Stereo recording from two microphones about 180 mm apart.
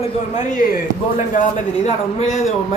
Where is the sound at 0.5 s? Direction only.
45° left (ahead or behind).